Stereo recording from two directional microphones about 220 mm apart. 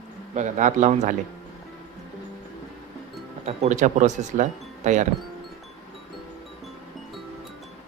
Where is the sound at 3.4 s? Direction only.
30° right (ahead or behind).